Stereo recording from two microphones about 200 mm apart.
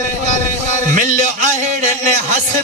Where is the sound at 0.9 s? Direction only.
40° right (ahead or behind).